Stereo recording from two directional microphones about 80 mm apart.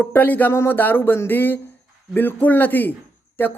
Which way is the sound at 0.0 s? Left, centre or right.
Left.